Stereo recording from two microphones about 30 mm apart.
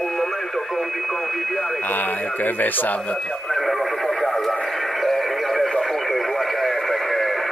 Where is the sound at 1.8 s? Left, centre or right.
Left.